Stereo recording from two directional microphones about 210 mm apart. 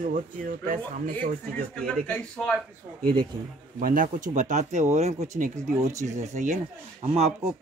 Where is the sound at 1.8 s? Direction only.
5° left (ahead or behind).